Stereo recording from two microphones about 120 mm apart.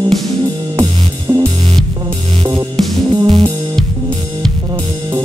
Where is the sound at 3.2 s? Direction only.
45° right (ahead or behind).